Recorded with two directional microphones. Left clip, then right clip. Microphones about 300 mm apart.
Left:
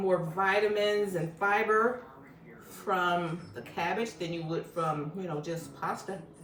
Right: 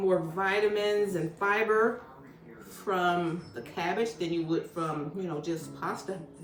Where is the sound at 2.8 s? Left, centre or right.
Centre.